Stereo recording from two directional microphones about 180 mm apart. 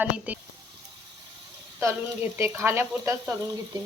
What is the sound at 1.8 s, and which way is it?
Speech, 15° right (ahead or behind).